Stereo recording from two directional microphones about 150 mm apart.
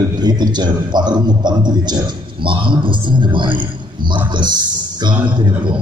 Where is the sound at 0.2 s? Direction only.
30° right (ahead or behind).